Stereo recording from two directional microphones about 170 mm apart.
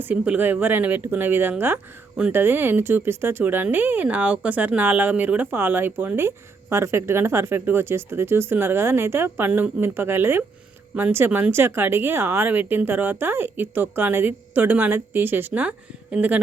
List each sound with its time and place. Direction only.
0.0 s speech: 10° right (ahead or behind)